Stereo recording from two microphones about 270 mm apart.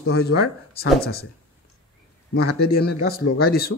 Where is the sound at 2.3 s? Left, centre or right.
Left.